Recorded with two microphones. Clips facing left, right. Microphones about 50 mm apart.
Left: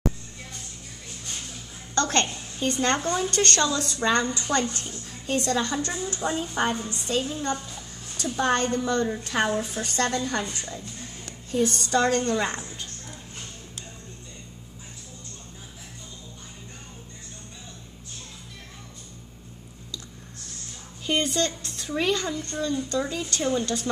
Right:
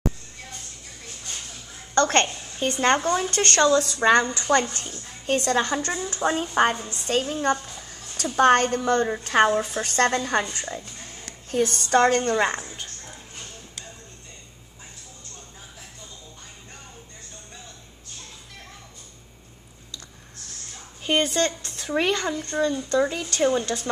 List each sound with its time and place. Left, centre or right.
2.0 s a woman's voice: right
6.2 s a woman's voice: right
12.4 s a woman's voice: right
21.0 s a woman's voice: right